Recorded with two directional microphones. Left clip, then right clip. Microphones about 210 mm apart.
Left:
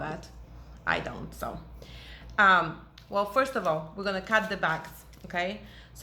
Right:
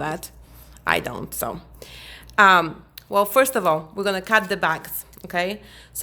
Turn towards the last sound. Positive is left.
turn(degrees=-60)  # may be behind; listen again after turning